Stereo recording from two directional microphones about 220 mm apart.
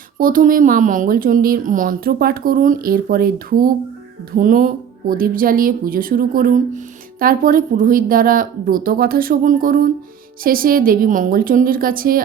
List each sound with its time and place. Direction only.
0.2 s speech: 40° right (ahead or behind)